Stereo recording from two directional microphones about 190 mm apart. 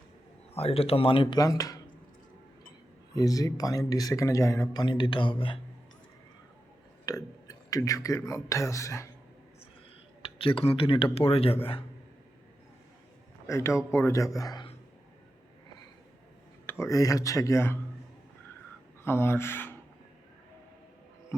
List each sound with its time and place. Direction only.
0.5 s speech: 30° left (ahead or behind)
3.2 s speech: 20° left (ahead or behind)
7.0 s speech: 20° left (ahead or behind)
10.2 s speech: 30° left (ahead or behind)
13.5 s a man's voice: 15° left (ahead or behind)
16.6 s a man's voice: 15° left (ahead or behind)
19.0 s a man's voice: 10° left (ahead or behind)